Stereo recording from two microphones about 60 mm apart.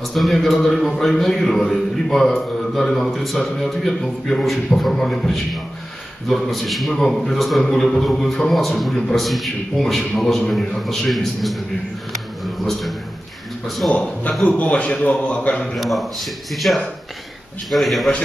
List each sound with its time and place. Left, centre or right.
0.1 s a man's voice: centre
12.1 s a sound: centre
13.7 s speech: centre
13.9 s a man's voice: left
15.6 s a man's voice: centre